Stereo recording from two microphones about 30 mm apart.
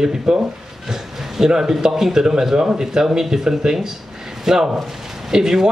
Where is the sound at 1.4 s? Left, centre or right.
Centre.